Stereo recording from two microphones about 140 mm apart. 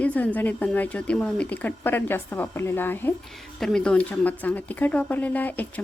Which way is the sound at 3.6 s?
5° left (ahead or behind).